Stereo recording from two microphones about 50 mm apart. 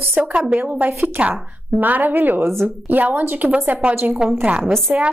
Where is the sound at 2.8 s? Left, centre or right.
Right.